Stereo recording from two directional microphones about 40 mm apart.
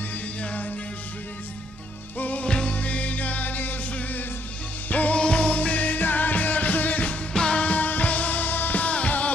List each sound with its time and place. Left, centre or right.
0.4 s music: left
2.1 s music: left
2.4 s music: left
2.7 s music: left
5.1 s music: left
7.3 s music: left
7.6 s music: left
8.8 s music: left